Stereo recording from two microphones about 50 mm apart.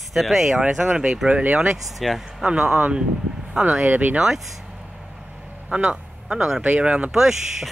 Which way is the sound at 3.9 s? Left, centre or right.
Right.